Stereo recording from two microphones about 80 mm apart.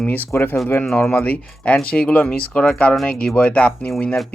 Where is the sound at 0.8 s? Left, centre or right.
Centre.